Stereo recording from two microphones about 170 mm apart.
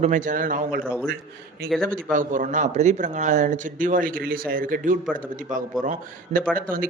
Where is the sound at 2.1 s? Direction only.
50° right (ahead or behind).